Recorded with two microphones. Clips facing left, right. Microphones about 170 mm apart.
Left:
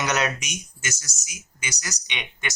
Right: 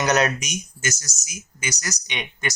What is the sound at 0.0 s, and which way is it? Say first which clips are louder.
Speech: right 4 dB; 40° right (ahead or behind).